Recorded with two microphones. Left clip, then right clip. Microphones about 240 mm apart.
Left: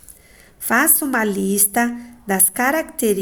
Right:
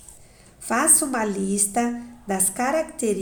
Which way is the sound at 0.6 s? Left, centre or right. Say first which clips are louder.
Left 4 dB; left.